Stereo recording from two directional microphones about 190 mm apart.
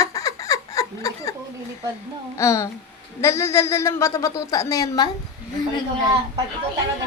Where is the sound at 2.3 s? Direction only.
15° left (ahead or behind).